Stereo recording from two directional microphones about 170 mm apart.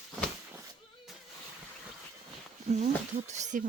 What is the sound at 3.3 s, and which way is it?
Speech, 45° right (ahead or behind).